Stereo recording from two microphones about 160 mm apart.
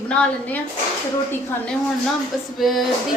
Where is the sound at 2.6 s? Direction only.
Centre (ahead or behind).